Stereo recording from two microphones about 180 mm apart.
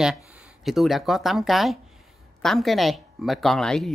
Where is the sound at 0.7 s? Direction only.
Centre (ahead or behind).